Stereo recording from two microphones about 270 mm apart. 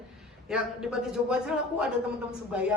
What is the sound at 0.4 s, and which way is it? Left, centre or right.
A woman's voice, centre.